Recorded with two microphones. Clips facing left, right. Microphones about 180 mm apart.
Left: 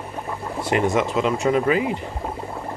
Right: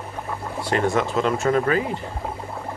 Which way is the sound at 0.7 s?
20° left (ahead or behind).